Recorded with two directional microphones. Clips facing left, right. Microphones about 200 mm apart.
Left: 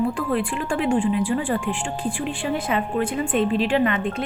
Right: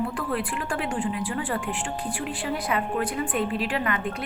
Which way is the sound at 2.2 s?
25° left (ahead or behind).